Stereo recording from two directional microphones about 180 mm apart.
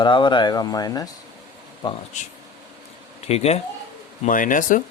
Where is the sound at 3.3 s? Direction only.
35° left (ahead or behind).